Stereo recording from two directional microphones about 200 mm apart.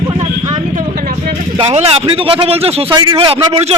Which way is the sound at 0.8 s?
45° right (ahead or behind).